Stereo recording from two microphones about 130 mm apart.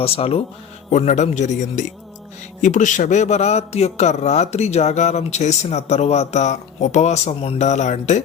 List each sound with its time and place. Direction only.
0.0 s speech: 50° left (ahead or behind)
0.9 s a man's voice: 60° left (ahead or behind)